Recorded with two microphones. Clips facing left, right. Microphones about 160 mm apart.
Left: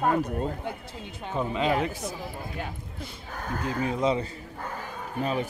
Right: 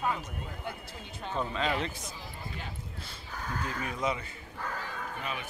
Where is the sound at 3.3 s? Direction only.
50° left (ahead or behind).